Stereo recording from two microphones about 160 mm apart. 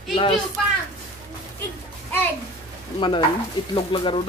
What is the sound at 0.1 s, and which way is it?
Speech, 35° left (ahead or behind).